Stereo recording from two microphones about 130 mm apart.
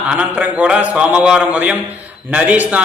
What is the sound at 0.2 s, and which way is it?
A man's voice, 10° right (ahead or behind).